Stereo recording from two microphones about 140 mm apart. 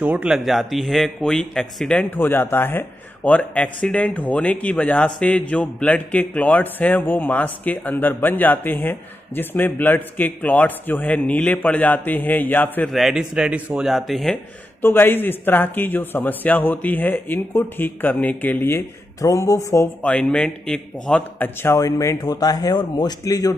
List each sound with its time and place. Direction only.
0.0 s speech: 5° right (ahead or behind); by 12.9 s 15° left (ahead or behind)
12.9 s speech: 5° right (ahead or behind)
14.8 s speech: 15° left (ahead or behind)
20.0 s a man's voice: 5° left (ahead or behind); by 23.5 s 25° left (ahead or behind)